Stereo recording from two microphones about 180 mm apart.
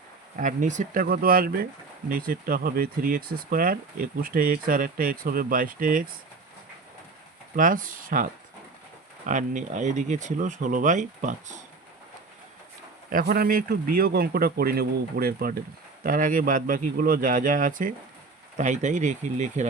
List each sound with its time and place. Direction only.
0.3 s speech: 45° right (ahead or behind)
7.5 s speech: 50° right (ahead or behind)
13.1 s speech: 55° right (ahead or behind)